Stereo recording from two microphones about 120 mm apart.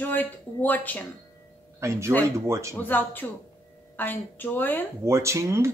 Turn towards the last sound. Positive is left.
turn(degrees=-25)  # may be behind; listen again after turning